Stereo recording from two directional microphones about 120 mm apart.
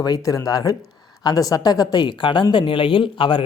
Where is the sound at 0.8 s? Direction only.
Centre (ahead or behind).